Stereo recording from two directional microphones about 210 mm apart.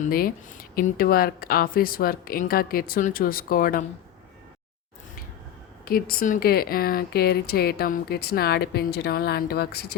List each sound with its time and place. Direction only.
0.0 s speech: 45° left (ahead or behind)
5.8 s speech: 45° left (ahead or behind)